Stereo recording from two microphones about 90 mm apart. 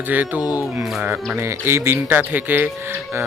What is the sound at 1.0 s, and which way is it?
Speech, 20° right (ahead or behind).